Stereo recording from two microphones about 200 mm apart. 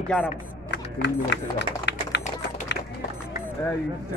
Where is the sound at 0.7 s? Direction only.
60° left (ahead or behind).